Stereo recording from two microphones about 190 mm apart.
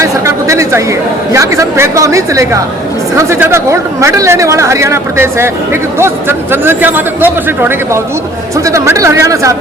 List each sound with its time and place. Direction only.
0.0 s chatter: 15° right (ahead or behind)
1.3 s speech: 15° right (ahead or behind)